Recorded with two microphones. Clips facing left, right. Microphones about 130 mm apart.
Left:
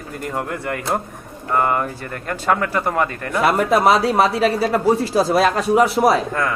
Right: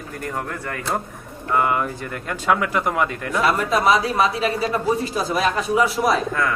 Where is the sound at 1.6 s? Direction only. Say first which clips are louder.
Left 2 dB; 5° right (ahead or behind).